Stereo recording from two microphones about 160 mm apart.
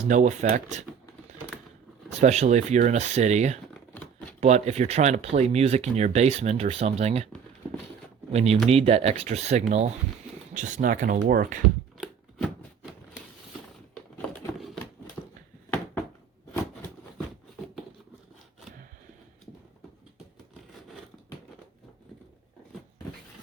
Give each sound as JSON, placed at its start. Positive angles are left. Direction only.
{"t": 0.1, "sound": "speech", "side_deg": -50}
{"t": 2.2, "sound": "speech", "side_deg": -45}
{"t": 8.3, "sound": "speech", "side_deg": -40}
{"t": 13.9, "sound": "a sound", "side_deg": 5}